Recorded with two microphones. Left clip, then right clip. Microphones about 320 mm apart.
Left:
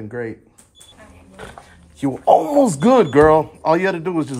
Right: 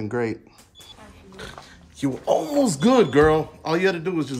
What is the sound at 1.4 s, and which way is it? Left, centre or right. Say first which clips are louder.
Speech: left 2 dB; centre.